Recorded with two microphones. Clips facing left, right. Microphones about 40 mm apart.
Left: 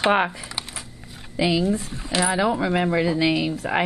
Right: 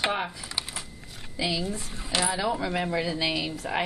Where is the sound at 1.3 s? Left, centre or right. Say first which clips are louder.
Left 8 dB; left.